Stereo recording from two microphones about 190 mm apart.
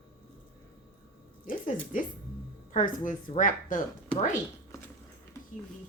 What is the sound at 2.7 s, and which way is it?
A woman's voice, 45° left (ahead or behind).